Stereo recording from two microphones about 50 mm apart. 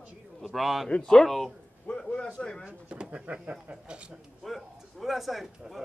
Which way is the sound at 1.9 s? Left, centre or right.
Left.